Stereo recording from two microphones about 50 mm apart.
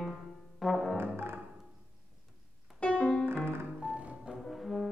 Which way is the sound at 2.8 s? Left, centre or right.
Left.